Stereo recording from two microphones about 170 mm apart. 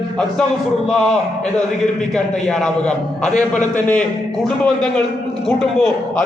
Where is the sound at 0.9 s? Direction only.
5° left (ahead or behind).